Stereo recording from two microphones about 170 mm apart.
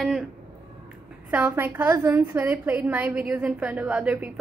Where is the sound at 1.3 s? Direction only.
10° right (ahead or behind).